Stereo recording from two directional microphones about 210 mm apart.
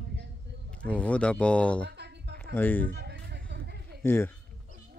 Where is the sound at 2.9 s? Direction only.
55° right (ahead or behind).